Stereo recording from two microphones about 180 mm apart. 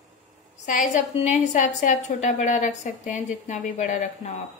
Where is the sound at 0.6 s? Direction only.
45° left (ahead or behind).